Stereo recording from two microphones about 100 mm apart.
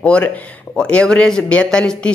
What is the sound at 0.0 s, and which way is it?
Speech, 10° left (ahead or behind).